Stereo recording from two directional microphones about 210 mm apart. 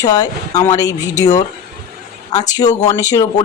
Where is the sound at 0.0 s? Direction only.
15° left (ahead or behind).